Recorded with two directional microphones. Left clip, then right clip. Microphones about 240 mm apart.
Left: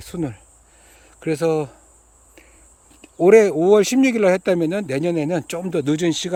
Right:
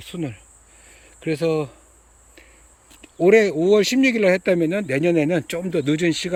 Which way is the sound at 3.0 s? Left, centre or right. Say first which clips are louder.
Left 3 dB; centre.